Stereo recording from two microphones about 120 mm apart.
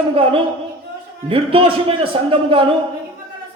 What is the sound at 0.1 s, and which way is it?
A man's voice, 50° right (ahead or behind).